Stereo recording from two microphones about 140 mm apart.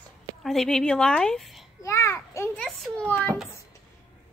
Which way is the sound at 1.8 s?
20° left (ahead or behind).